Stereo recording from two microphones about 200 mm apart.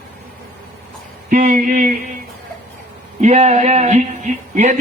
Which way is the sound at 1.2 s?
40° right (ahead or behind).